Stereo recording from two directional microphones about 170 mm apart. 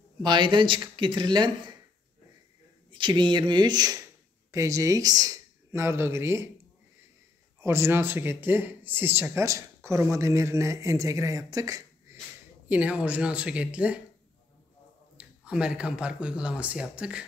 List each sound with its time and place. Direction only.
0.2 s speech: 25° right (ahead or behind)
2.9 s speech: 25° right (ahead or behind)
7.6 s speech: 15° right (ahead or behind)
12.6 s speech: 10° right (ahead or behind)
15.1 s speech: 5° right (ahead or behind)